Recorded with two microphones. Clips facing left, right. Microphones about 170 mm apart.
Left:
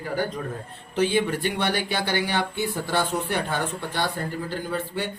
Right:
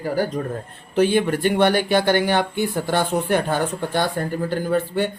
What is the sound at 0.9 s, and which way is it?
Speech, 55° right (ahead or behind).